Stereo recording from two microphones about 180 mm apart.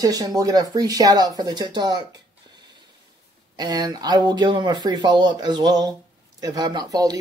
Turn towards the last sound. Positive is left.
turn(degrees=-20)  # may be behind; listen again after turning